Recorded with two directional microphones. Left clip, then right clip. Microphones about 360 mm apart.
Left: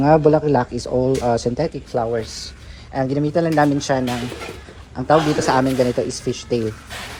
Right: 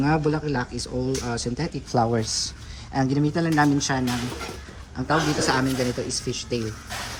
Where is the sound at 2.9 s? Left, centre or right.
Centre.